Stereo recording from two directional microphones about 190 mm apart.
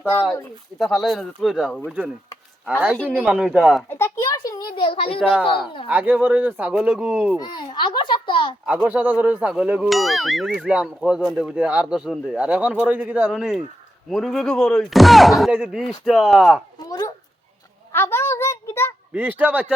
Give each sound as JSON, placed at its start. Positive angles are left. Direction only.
{"t": 0.8, "sound": "speech", "side_deg": 0}
{"t": 3.0, "sound": "speech", "side_deg": 5}
{"t": 3.2, "sound": "speech", "side_deg": -5}
{"t": 3.8, "sound": "a sound", "side_deg": 10}
{"t": 5.2, "sound": "speech", "side_deg": 0}
{"t": 7.3, "sound": "a sound", "side_deg": 20}
{"t": 8.6, "sound": "speech", "side_deg": -5}
{"t": 16.8, "sound": "speech", "side_deg": 25}
{"t": 17.9, "sound": "a sound", "side_deg": 10}
{"t": 19.1, "sound": "speech", "side_deg": -10}